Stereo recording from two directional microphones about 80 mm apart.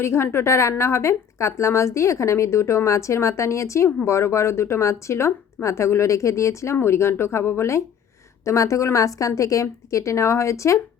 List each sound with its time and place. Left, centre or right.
0.0 s a woman's voice: left